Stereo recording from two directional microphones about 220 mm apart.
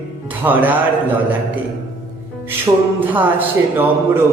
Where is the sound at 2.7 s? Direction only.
15° right (ahead or behind).